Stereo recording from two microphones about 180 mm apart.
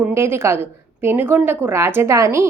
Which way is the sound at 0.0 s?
15° right (ahead or behind).